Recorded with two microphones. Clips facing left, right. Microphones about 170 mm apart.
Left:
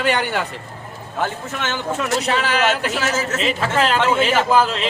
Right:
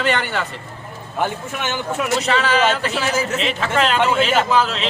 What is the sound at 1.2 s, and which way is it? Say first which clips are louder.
Speech: right 1 dB; 15° right (ahead or behind).